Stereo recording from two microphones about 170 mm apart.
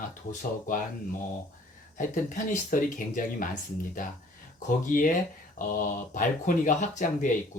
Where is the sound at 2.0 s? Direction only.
50° left (ahead or behind).